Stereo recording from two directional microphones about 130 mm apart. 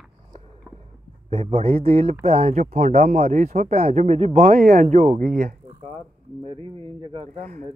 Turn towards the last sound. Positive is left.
turn(degrees=-45)  # may be behind; listen again after turning